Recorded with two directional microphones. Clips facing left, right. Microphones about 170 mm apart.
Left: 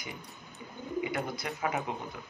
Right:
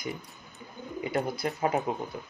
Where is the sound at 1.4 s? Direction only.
35° right (ahead or behind).